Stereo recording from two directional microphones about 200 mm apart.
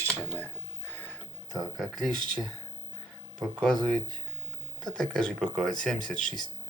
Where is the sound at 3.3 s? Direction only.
Centre (ahead or behind).